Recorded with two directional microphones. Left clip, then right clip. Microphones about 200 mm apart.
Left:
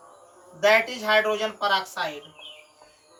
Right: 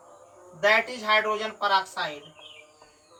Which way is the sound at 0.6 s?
5° right (ahead or behind).